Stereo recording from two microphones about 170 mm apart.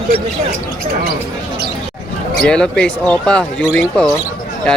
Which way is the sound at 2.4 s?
5° left (ahead or behind).